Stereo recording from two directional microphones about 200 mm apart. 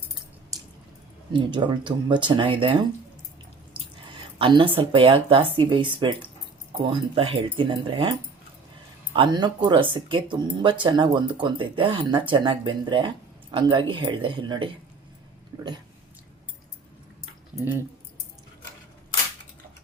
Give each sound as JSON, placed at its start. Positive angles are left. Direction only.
{"t": 1.3, "sound": "speech", "side_deg": -25}
{"t": 4.4, "sound": "speech", "side_deg": -25}
{"t": 9.1, "sound": "speech", "side_deg": -20}